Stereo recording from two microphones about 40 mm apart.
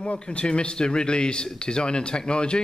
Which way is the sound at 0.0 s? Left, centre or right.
Left.